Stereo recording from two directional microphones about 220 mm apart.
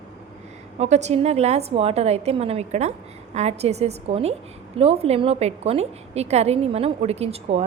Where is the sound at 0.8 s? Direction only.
30° right (ahead or behind).